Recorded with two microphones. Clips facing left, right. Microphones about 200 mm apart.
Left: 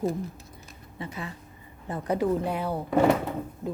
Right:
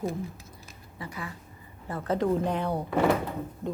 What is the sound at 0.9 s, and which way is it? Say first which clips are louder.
Speech: left 2 dB; 25° left (ahead or behind).